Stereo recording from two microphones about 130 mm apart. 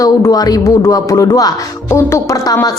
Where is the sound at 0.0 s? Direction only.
30° left (ahead or behind).